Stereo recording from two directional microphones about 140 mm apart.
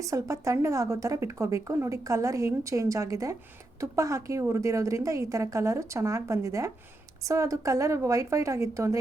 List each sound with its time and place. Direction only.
0.0 s a woman's voice: 25° right (ahead or behind)